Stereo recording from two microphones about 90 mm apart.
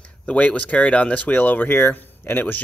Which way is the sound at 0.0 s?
15° left (ahead or behind).